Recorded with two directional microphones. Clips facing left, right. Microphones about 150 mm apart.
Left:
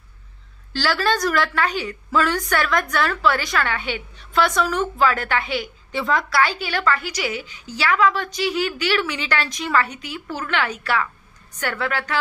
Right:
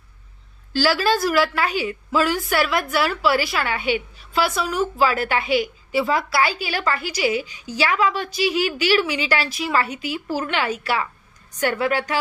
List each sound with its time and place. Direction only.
0.7 s a woman's voice: 15° right (ahead or behind)
10.2 s speech: 30° right (ahead or behind)
10.5 s a woman's voice: 10° right (ahead or behind)